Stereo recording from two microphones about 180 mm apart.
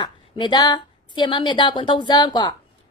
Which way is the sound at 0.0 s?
25° left (ahead or behind).